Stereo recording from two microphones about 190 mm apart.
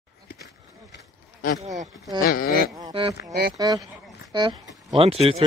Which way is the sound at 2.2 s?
45° left (ahead or behind).